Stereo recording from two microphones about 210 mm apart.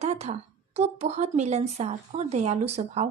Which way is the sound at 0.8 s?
30° right (ahead or behind).